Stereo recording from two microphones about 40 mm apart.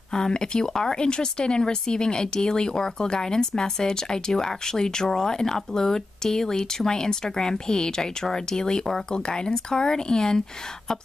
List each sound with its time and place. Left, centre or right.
0.1 s speech: centre